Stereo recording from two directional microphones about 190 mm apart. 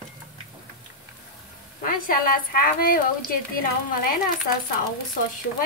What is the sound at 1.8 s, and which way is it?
A woman's voice, 50° left (ahead or behind).